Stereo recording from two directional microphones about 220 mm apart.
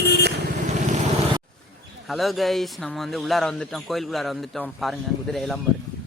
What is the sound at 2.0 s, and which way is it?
Speech, centre (ahead or behind).